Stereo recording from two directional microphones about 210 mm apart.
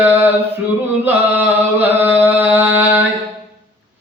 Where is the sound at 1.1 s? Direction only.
10° right (ahead or behind).